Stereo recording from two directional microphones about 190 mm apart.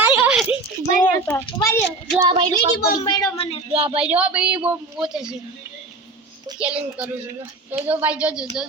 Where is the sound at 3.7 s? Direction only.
30° right (ahead or behind).